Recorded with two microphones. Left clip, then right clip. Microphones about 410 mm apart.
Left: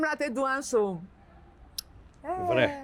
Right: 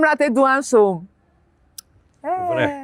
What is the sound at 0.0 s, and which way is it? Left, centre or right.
Speech, right.